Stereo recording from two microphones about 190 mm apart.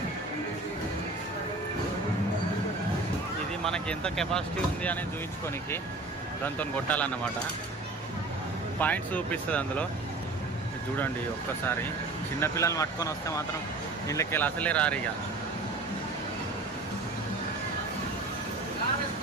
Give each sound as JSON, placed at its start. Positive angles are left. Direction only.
{"t": 3.6, "sound": "speech", "side_deg": 5}
{"t": 6.4, "sound": "speech", "side_deg": 10}
{"t": 8.8, "sound": "speech", "side_deg": 10}
{"t": 12.4, "sound": "speech", "side_deg": 15}